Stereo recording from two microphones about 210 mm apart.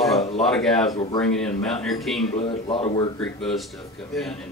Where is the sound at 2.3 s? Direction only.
25° left (ahead or behind).